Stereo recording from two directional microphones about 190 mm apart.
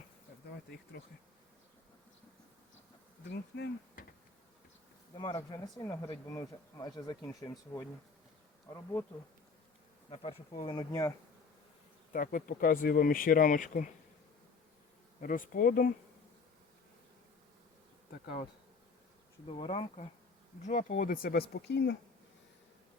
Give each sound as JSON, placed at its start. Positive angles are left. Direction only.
{"t": 3.2, "sound": "speech", "side_deg": 65}
{"t": 5.1, "sound": "speech", "side_deg": 25}
{"t": 7.2, "sound": "speech", "side_deg": 5}
{"t": 10.1, "sound": "speech", "side_deg": 30}
{"t": 12.1, "sound": "speech", "side_deg": 45}
{"t": 15.2, "sound": "speech", "side_deg": 45}
{"t": 19.5, "sound": "speech", "side_deg": 30}
{"t": 20.7, "sound": "speech", "side_deg": 40}
{"t": 21.5, "sound": "speech", "side_deg": 60}